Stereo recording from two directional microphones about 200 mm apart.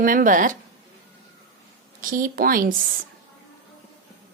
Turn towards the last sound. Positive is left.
turn(degrees=-45)  # may be behind; listen again after turning